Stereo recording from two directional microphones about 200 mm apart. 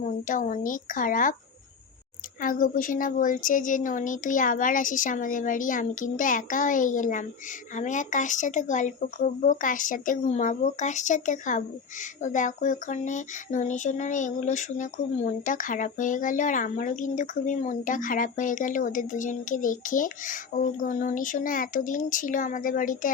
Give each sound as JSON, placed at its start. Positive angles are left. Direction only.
{"t": 0.0, "sound": "speech", "side_deg": 40}
{"t": 2.4, "sound": "speech", "side_deg": 45}